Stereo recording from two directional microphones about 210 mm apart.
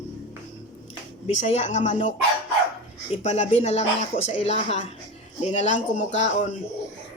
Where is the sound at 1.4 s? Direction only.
30° left (ahead or behind).